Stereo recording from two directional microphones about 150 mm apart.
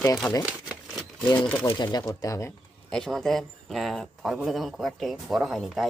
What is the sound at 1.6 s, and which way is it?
Speech, 30° left (ahead or behind).